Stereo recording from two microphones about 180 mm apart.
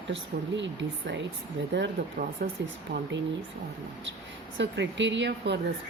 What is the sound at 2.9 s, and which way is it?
Speech, 85° right.